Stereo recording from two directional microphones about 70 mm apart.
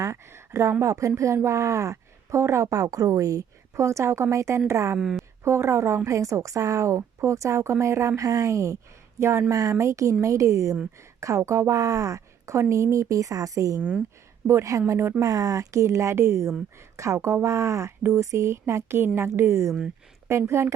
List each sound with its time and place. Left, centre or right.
0.0 s a woman's voice: right
4.9 s a woman's voice: centre
5.4 s a woman's voice: right
9.5 s a woman's voice: right
13.7 s speech: centre
14.4 s a woman's voice: right
15.2 s a woman's voice: right